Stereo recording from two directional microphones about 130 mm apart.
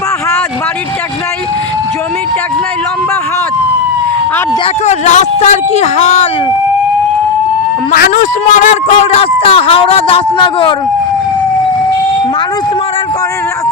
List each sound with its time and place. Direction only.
4.9 s speech: 65° left (ahead or behind)
7.9 s speech: 85° left; by 10.8 s 40° left (ahead or behind)